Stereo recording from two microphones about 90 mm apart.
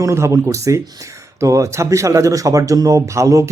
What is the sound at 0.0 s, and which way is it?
Speech, 35° right (ahead or behind).